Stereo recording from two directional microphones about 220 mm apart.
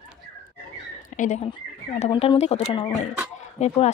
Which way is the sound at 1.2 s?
35° left (ahead or behind).